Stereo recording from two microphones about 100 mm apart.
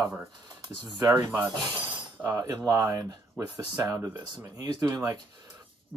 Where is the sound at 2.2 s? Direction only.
Centre (ahead or behind).